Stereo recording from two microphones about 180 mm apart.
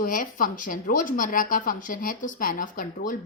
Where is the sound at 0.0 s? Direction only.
50° left (ahead or behind).